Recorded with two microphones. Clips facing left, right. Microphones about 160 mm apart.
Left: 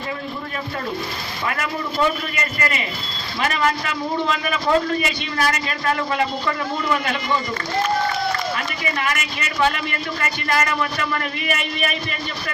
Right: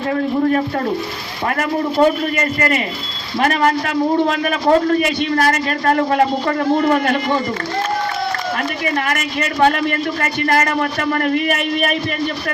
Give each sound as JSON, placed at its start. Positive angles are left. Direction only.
{"t": 1.5, "sound": "a man's voice", "side_deg": -50}
{"t": 8.5, "sound": "a man's voice", "side_deg": -50}